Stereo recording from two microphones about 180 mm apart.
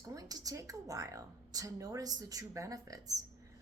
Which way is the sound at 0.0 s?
20° right (ahead or behind).